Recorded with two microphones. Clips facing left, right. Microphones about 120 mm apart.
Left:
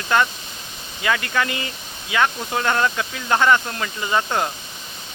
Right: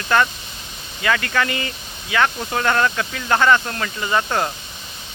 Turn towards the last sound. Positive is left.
turn(degrees=10)  # may be behind; listen again after turning